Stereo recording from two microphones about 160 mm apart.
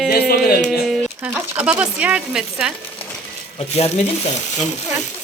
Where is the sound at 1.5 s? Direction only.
10° right (ahead or behind).